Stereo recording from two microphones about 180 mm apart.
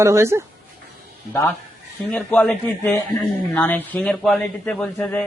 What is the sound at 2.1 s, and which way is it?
A man's voice, 5° left (ahead or behind).